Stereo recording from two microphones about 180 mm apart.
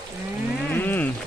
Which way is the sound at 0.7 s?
10° left (ahead or behind).